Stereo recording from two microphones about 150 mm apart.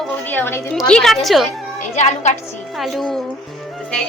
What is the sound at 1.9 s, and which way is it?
Speech, 50° left (ahead or behind).